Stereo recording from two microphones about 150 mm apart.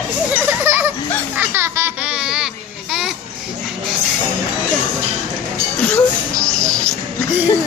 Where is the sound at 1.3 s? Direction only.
15° right (ahead or behind).